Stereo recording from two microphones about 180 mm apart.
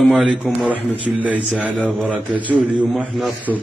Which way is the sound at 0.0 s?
Centre (ahead or behind).